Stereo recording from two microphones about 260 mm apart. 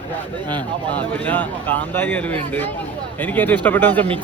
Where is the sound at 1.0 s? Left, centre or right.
Centre.